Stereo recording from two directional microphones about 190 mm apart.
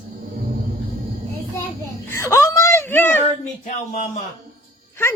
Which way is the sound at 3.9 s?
40° left (ahead or behind).